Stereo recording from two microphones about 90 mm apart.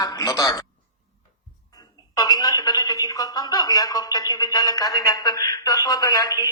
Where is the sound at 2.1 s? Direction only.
45° left (ahead or behind).